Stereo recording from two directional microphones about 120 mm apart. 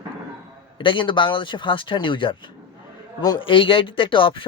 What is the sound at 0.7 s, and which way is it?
Speech, 45° left (ahead or behind).